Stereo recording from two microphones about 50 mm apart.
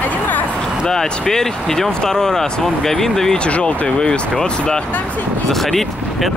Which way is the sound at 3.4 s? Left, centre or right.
Left.